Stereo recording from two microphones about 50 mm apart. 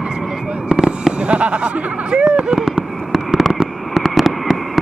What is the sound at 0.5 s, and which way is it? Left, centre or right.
Fireworks, centre.